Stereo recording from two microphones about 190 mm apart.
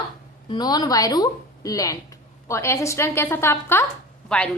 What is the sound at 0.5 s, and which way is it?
A woman's voice, 20° left (ahead or behind).